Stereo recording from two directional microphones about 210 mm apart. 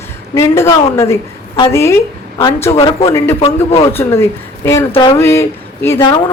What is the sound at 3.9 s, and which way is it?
Speech, 10° left (ahead or behind).